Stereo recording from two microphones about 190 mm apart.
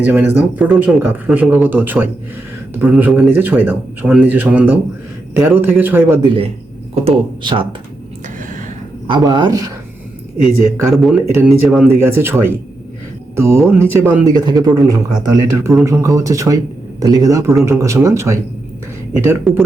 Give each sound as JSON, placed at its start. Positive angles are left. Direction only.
{"t": 0.0, "sound": "speech", "side_deg": -10}
{"t": 6.2, "sound": "speech", "side_deg": -30}
{"t": 9.0, "sound": "speech", "side_deg": -25}
{"t": 10.4, "sound": "speech", "side_deg": 0}
{"t": 14.3, "sound": "speech", "side_deg": -20}
{"t": 19.5, "sound": "speech", "side_deg": 0}